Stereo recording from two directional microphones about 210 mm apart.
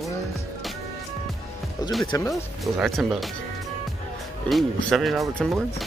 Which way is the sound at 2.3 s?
Centre (ahead or behind).